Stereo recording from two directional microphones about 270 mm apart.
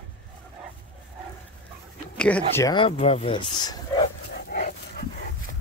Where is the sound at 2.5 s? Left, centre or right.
Centre.